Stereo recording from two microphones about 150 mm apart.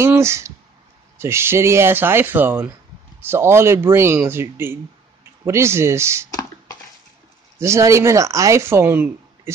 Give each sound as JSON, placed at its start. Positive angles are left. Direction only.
{"t": 0.0, "sound": "speech", "side_deg": -15}
{"t": 7.6, "sound": "speech", "side_deg": -20}